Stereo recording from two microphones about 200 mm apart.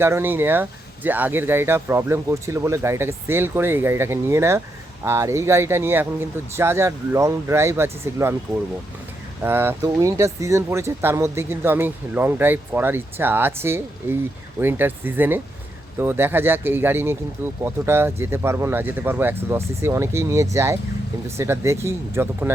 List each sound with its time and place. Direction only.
0.0 s speech: 10° right (ahead or behind)
9.4 s speech: 10° right (ahead or behind)